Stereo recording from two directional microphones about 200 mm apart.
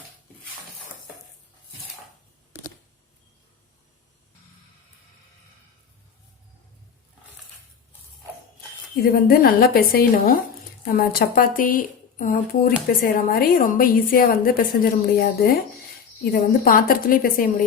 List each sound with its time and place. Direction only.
9.1 s a woman's voice: 50° left (ahead or behind)